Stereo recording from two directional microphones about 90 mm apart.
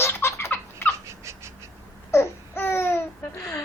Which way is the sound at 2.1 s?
25° left (ahead or behind).